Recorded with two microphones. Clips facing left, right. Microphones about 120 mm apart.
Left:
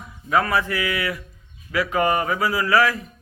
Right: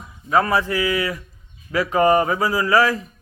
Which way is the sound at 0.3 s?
30° right (ahead or behind).